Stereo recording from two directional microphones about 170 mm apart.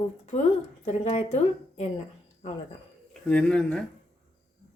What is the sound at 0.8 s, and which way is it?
Speech, 45° left (ahead or behind).